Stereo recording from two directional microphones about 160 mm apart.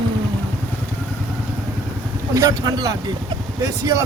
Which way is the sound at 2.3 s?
20° right (ahead or behind).